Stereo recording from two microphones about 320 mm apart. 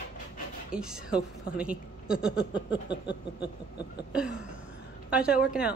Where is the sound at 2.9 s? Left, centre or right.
Left.